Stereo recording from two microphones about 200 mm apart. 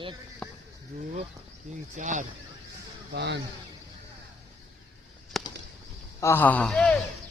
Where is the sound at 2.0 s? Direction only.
40° right (ahead or behind).